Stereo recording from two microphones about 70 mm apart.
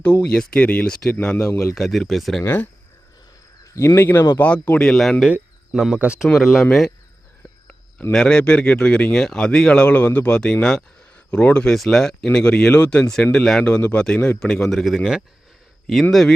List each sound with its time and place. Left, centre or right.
0.0 s speech: left
0.9 s speech: centre
1.1 s speech: left
1.4 s a man's voice: left
1.7 s speech: centre
2.4 s a man's voice: left
3.6 s speech: left
4.4 s speech: left
4.9 s speech: centre
8.1 s speech: centre